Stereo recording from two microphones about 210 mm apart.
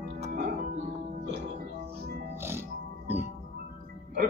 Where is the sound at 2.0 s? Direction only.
50° right (ahead or behind).